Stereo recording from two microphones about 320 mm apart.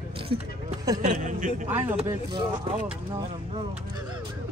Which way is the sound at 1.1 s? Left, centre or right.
Right.